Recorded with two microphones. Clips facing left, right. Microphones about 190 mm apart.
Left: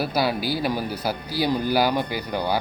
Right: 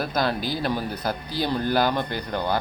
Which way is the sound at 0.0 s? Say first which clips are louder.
Left 2 dB; 10° left (ahead or behind).